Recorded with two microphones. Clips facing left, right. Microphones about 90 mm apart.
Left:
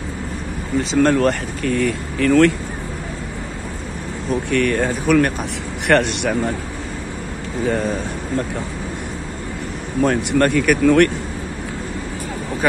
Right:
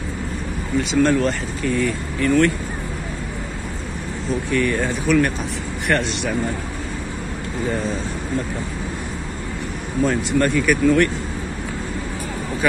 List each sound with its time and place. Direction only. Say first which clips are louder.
0.9 s speech: left 3 dB; 55° left (ahead or behind); by 2.5 s 90° left
4.5 s speech: left 2 dB; 65° left (ahead or behind)
5.9 s speech: left 5 dB; 65° left (ahead or behind)
7.6 s speech: left 4 dB; 65° left (ahead or behind)
10.0 s speech: left 3 dB; 60° left (ahead or behind)